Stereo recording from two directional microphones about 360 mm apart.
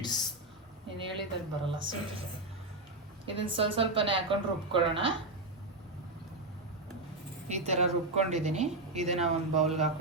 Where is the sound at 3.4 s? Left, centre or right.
Centre.